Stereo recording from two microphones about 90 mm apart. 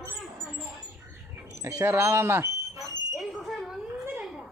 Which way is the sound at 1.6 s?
30° right (ahead or behind).